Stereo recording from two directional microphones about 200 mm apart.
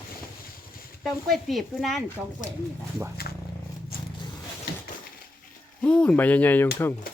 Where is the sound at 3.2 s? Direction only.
50° left (ahead or behind).